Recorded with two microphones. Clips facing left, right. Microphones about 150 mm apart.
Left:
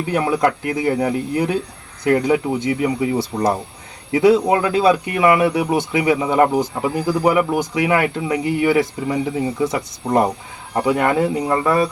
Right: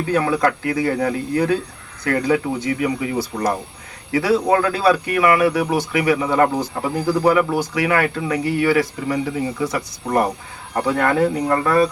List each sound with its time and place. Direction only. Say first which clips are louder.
0.1 s speech: left 1 dB; 20° left (ahead or behind)